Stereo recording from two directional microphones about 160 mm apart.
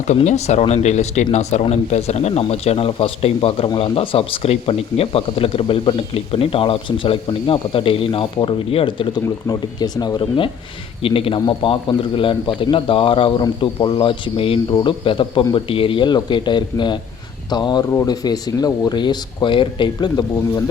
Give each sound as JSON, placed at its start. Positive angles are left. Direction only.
{"t": 0.1, "sound": "speech", "side_deg": 45}